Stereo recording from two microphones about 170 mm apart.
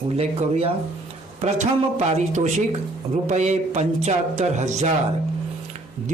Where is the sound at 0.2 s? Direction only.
40° right (ahead or behind).